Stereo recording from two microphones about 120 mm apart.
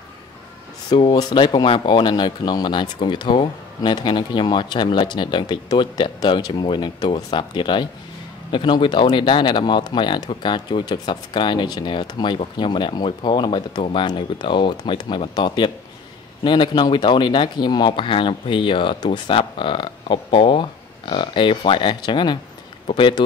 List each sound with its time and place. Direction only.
0.8 s speech: 40° left (ahead or behind)